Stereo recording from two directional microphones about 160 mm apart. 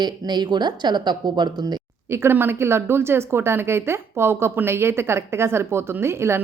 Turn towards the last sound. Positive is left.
turn(degrees=-15)  # may be behind; listen again after turning